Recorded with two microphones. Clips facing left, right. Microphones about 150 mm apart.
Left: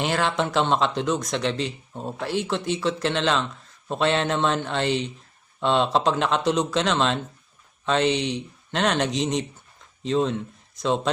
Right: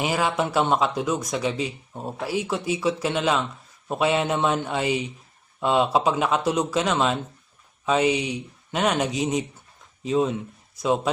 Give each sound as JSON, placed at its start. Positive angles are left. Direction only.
{"t": 0.0, "sound": "a man's voice", "side_deg": -5}